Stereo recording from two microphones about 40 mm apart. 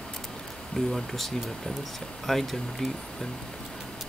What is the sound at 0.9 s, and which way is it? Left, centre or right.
Speech, centre.